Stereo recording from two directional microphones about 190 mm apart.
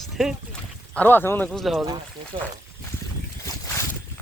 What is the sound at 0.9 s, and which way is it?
Speech, 10° left (ahead or behind).